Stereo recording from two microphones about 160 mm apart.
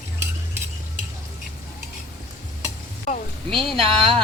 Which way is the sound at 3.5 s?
Centre (ahead or behind).